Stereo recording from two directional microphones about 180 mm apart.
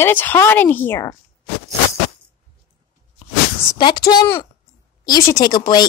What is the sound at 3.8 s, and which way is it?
A woman's voice, 25° left (ahead or behind).